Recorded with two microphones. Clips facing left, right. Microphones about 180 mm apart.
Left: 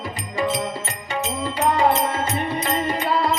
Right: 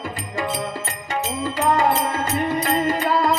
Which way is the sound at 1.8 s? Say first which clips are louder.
Left 1 dB; 45° right (ahead or behind).